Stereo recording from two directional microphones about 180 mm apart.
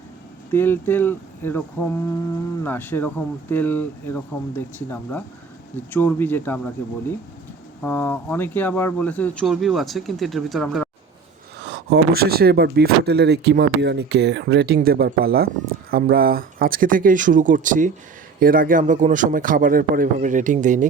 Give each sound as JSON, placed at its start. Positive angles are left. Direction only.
{"t": 0.5, "sound": "speech", "side_deg": 10}
{"t": 7.8, "sound": "speech", "side_deg": 10}
{"t": 11.6, "sound": "a man's voice", "side_deg": -70}